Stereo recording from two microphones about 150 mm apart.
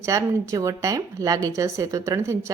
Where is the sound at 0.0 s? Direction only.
20° right (ahead or behind).